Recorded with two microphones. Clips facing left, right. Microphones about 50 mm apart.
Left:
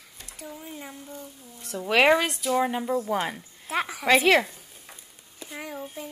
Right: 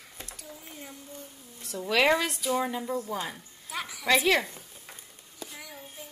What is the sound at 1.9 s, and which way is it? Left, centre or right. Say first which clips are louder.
Speech: left 4 dB; left.